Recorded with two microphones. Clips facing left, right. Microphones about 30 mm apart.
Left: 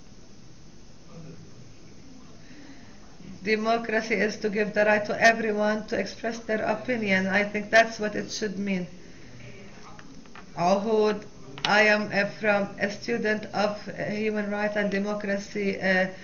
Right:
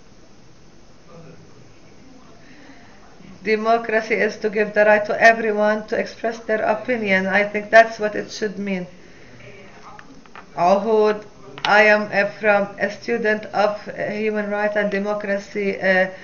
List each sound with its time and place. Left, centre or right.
3.4 s speech: centre
9.5 s a sound: right
12.8 s speech: centre